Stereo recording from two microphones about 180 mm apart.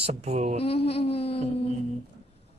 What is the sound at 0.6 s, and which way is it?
Speech, 35° left (ahead or behind).